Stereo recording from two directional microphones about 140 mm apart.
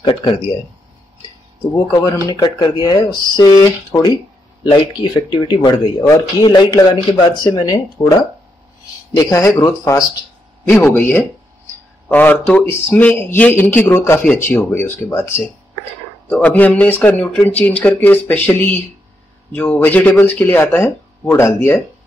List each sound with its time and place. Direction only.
0.1 s speech: 45° left (ahead or behind)
2.4 s speech: 30° left (ahead or behind)
9.1 s speech: 25° left (ahead or behind)